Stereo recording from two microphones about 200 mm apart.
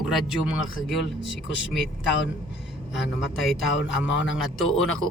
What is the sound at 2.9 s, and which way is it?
A man's voice, centre (ahead or behind).